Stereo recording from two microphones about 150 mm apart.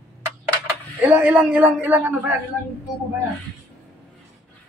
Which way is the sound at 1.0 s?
10° right (ahead or behind).